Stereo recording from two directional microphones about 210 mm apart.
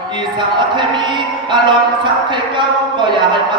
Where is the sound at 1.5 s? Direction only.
20° right (ahead or behind).